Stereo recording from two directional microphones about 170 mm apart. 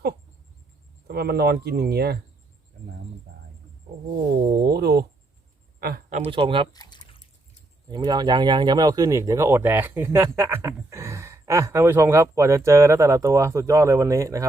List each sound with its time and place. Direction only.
1.0 s speech: 70° right (ahead or behind)
4.6 s a sound: 70° right (ahead or behind)
6.1 s speech: 45° right (ahead or behind)
6.3 s speech: 30° right (ahead or behind)
6.7 s a sound: 25° left (ahead or behind)
7.9 s speech: 25° right (ahead or behind)